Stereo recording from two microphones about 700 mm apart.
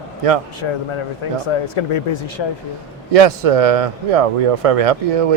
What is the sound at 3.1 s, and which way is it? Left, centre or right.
Speech, right.